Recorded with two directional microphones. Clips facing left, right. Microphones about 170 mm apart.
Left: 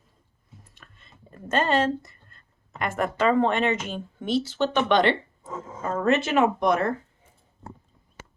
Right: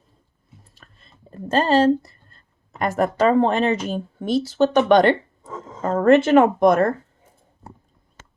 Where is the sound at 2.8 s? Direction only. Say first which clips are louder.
Right 5 dB; 40° right (ahead or behind).